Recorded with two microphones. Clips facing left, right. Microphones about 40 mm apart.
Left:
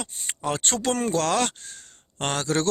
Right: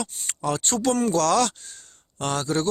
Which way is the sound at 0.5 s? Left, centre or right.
Left.